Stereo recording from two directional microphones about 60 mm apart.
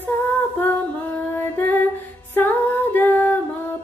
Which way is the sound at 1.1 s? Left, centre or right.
Left.